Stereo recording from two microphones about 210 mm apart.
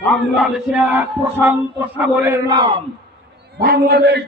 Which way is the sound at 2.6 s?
25° right (ahead or behind).